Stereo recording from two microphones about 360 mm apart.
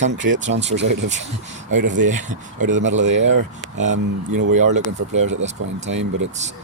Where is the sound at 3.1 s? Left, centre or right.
Right.